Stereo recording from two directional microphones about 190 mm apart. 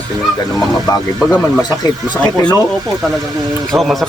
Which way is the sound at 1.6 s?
20° left (ahead or behind).